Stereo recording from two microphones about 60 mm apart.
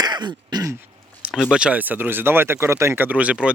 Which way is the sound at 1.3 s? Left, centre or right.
Centre.